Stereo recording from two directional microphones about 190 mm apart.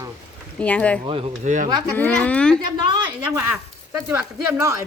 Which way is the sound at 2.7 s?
25° right (ahead or behind).